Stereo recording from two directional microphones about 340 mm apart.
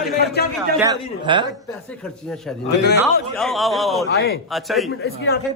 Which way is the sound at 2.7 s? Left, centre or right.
Left.